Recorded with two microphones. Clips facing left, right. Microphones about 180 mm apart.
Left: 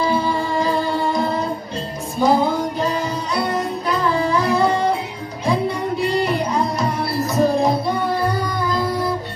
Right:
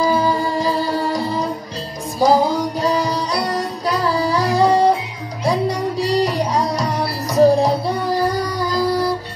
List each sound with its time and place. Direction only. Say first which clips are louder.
0.0 s music: right 2 dB; 40° right (ahead or behind)